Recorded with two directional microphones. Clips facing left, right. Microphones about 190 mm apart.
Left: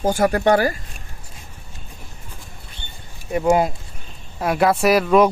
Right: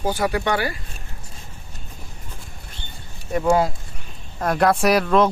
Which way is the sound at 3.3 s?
15° left (ahead or behind).